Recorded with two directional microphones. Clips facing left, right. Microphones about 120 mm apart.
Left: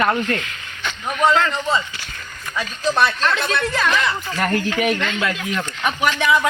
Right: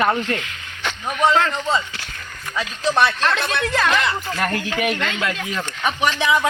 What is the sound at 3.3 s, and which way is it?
Speech, 5° left (ahead or behind).